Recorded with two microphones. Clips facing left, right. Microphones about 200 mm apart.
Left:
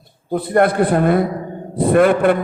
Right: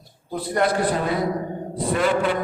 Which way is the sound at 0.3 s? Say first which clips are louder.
Left 7 dB; 55° left (ahead or behind).